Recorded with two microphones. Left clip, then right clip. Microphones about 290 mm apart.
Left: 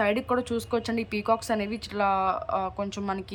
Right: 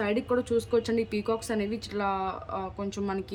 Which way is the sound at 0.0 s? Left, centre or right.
Centre.